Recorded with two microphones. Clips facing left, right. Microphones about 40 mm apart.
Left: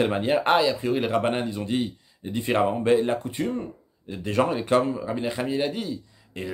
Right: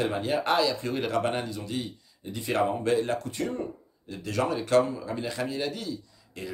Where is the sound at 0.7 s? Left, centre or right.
Centre.